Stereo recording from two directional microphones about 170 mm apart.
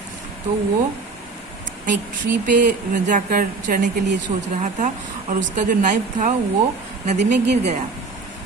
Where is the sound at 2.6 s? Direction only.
50° right (ahead or behind).